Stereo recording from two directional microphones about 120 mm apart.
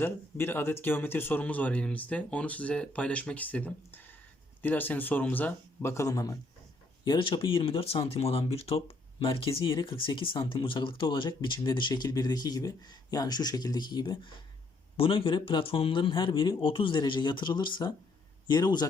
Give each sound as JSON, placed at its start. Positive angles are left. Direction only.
{"t": 0.0, "sound": "speech", "side_deg": 20}
{"t": 14.9, "sound": "speech", "side_deg": 50}